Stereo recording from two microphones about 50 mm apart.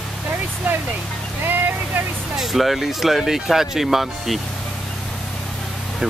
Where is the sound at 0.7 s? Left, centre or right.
Right.